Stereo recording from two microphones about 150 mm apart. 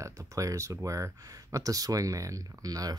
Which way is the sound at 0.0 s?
20° right (ahead or behind).